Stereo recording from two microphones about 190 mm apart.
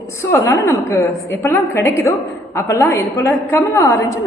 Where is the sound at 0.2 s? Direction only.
15° left (ahead or behind).